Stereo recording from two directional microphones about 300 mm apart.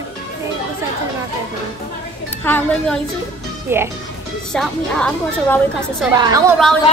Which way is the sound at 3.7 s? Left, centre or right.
Centre.